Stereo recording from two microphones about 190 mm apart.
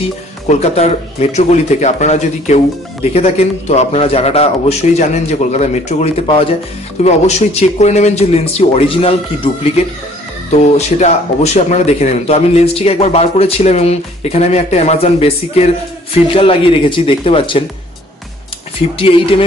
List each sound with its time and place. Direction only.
0.0 s speech: 35° left (ahead or behind)
18.9 s speech: 30° left (ahead or behind)